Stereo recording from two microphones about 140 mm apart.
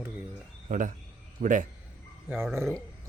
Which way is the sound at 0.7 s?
70° right (ahead or behind).